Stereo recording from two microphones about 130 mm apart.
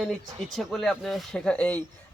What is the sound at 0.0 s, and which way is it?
Speech, centre (ahead or behind).